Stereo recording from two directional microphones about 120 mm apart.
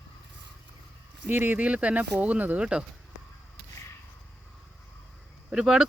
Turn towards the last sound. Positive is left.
turn(degrees=-5)  # may be behind; listen again after turning